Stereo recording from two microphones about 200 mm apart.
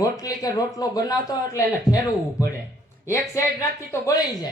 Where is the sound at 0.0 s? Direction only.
20° left (ahead or behind).